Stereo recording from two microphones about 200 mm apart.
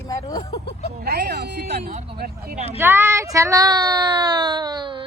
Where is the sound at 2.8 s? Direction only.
10° right (ahead or behind).